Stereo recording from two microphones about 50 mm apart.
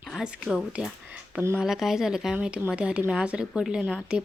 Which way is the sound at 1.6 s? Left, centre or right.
Centre.